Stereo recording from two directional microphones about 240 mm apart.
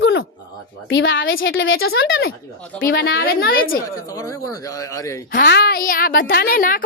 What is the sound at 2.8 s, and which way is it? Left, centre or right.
Speech, left.